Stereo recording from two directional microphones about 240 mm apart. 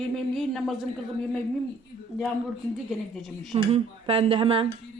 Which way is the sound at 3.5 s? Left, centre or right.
Right.